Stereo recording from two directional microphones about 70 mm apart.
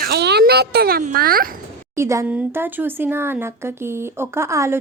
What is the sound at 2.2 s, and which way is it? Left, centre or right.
Speech, right.